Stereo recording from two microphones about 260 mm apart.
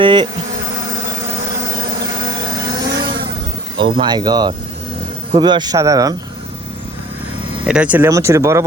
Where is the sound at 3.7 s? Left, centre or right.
Centre.